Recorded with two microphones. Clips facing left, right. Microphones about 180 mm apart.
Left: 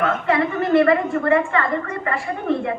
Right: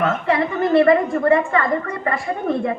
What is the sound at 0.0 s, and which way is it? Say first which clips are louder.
A woman's voice: even; 35° right (ahead or behind).